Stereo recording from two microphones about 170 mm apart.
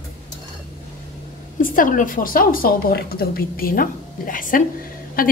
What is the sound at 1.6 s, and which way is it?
A woman's voice, 50° left (ahead or behind).